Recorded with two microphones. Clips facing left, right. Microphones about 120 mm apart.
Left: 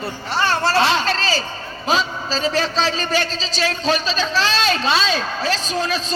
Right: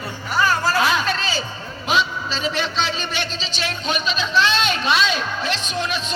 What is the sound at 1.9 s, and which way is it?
A man's voice, 35° left (ahead or behind).